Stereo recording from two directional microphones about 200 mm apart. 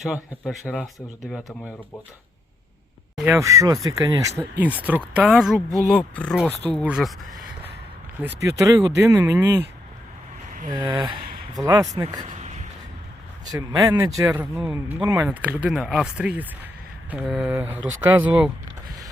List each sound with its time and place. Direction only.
0.0 s speech: centre (ahead or behind)
3.2 s speech: 15° right (ahead or behind)
8.4 s speech: 15° right (ahead or behind)
10.7 s a sound: 20° right (ahead or behind)
11.6 s speech: 15° right (ahead or behind)
12.2 s a sound: 35° right (ahead or behind)
13.5 s speech: 15° right (ahead or behind)